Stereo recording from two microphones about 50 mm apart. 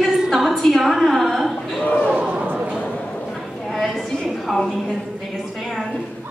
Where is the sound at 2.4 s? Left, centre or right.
Right.